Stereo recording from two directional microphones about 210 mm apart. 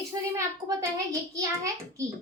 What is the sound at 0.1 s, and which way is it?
A child's voice, 15° right (ahead or behind).